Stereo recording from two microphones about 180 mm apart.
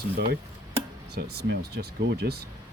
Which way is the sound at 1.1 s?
65° right (ahead or behind).